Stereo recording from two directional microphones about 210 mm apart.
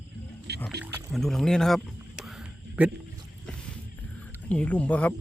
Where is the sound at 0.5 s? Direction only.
50° right (ahead or behind).